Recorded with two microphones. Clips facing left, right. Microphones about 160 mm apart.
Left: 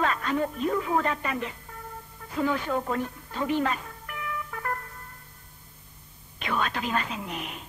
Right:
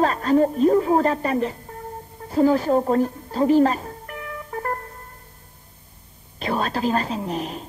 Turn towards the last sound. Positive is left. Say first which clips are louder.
# right 8 dB
turn(degrees=-35)  # may be behind; listen again after turning